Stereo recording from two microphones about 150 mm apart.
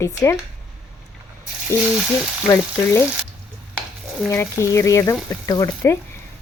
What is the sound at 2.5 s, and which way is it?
Speech, 20° left (ahead or behind).